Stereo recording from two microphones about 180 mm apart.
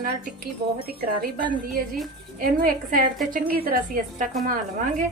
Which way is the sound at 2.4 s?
50° right (ahead or behind).